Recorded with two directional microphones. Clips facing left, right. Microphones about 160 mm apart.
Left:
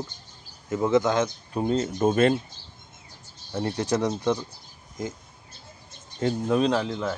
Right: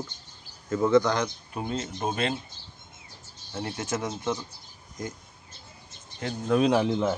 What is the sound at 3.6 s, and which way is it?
Speech, 35° left (ahead or behind).